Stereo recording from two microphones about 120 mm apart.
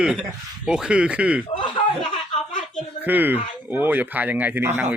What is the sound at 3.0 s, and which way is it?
A man's voice, 15° right (ahead or behind).